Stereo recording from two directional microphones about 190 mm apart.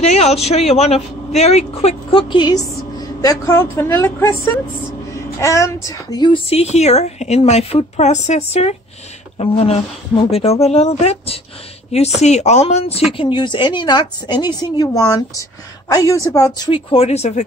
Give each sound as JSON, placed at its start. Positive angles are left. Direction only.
{"t": 0.0, "sound": "a woman's voice", "side_deg": 35}